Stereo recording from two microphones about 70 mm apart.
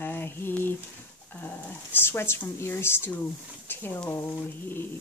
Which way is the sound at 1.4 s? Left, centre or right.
Left.